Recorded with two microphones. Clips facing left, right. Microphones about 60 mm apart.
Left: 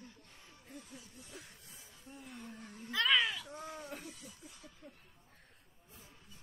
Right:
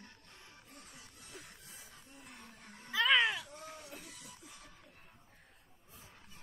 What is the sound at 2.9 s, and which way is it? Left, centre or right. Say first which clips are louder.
Cat: right 2 dB; centre.